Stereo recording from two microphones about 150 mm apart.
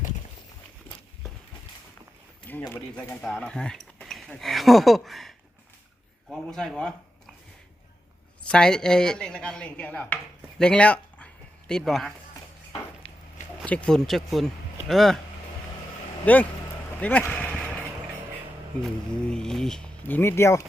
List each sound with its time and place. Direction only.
2.5 s speech: 10° left (ahead or behind)
6.3 s speech: 5° left (ahead or behind)
8.4 s speech: 5° left (ahead or behind)
13.0 s a sound: 35° left (ahead or behind)
13.7 s speech: 5° left (ahead or behind)
16.2 s speech: 10° left (ahead or behind)
16.9 s a sound: 10° left (ahead or behind)
19.1 s speech: 5° left (ahead or behind)